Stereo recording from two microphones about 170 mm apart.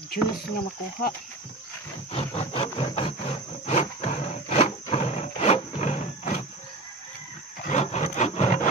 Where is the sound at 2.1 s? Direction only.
35° left (ahead or behind).